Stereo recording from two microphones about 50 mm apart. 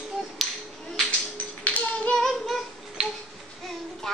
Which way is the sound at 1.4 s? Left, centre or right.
Left.